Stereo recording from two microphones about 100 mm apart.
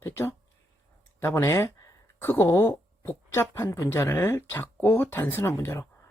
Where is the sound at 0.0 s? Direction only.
25° left (ahead or behind).